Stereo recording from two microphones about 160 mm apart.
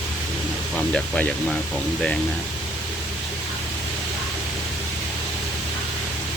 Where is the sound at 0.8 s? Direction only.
5° left (ahead or behind).